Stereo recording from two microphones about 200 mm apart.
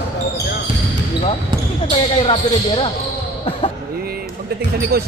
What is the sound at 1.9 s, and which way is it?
Speech, 30° left (ahead or behind).